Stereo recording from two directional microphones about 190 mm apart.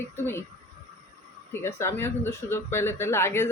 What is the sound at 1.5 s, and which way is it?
Speech, 15° left (ahead or behind).